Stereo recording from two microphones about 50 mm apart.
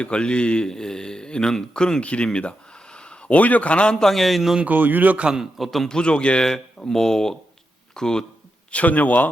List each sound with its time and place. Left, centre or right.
0.0 s a man's voice: left; by 4.5 s centre
4.6 s speech: right
5.2 s a man's voice: centre
5.5 s a man's voice: centre
5.9 s speech: centre
8.7 s a man's voice: left